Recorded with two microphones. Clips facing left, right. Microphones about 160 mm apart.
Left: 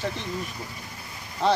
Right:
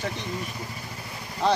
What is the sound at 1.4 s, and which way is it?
Speech, centre (ahead or behind).